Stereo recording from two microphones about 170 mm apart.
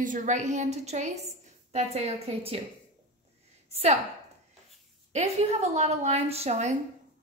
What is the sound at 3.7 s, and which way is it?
Speech, 40° right (ahead or behind).